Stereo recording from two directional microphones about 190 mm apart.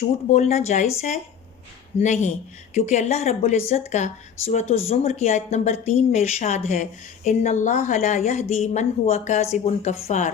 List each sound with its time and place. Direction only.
0.3 s a woman's voice: 35° left (ahead or behind)